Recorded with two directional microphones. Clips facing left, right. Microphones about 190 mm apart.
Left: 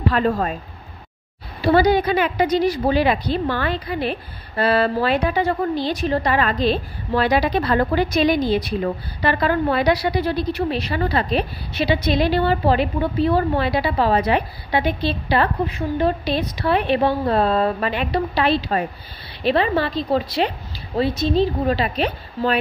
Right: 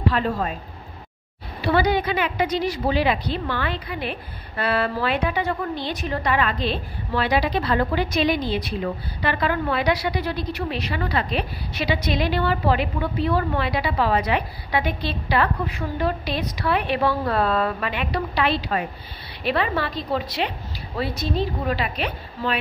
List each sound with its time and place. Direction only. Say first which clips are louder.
0.1 s speech: left 4 dB; 50° left (ahead or behind)
1.6 s a woman's voice: left 5 dB; 35° left (ahead or behind)